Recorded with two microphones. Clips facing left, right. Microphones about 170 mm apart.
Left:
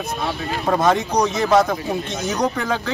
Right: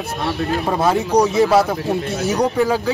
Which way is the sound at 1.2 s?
5° right (ahead or behind).